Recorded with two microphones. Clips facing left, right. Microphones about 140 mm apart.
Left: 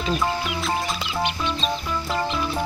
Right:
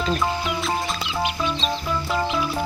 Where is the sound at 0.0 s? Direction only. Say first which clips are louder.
Right 1 dB; centre (ahead or behind).